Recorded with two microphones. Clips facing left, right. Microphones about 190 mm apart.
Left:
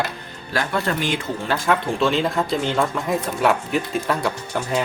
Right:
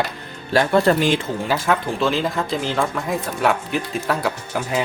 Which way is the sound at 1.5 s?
Centre (ahead or behind).